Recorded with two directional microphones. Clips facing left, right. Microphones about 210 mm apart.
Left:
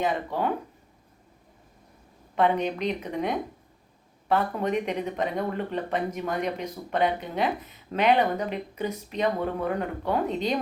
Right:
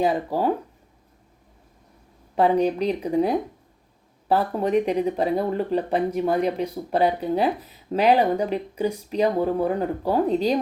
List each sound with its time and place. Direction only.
0.0 s speech: 35° right (ahead or behind)
2.3 s speech: 35° right (ahead or behind)